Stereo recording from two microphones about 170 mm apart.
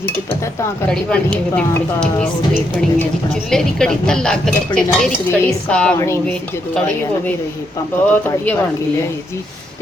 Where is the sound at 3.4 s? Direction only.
5° left (ahead or behind).